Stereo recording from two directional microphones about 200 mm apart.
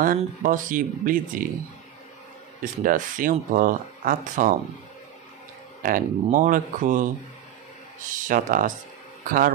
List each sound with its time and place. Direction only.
0.0 s speech: 40° right (ahead or behind)
2.6 s speech: 45° right (ahead or behind)
5.8 s speech: 45° right (ahead or behind)
8.1 s speech: 40° right (ahead or behind)